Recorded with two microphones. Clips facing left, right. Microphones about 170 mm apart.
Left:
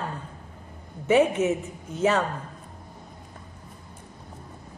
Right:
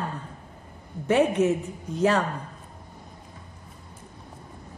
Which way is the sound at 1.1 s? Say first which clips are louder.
Even; centre (ahead or behind).